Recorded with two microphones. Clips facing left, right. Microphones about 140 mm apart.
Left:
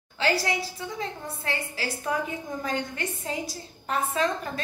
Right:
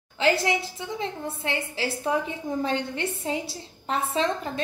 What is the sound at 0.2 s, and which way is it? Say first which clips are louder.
A woman's voice: right 3 dB; 25° right (ahead or behind).